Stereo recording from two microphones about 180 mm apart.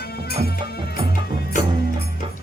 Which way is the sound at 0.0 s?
60° left (ahead or behind).